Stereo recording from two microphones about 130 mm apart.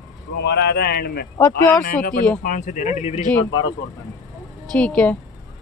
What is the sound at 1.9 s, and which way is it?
Speech, 90° left.